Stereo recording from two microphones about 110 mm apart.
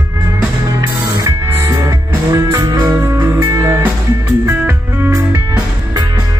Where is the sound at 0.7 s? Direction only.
30° right (ahead or behind).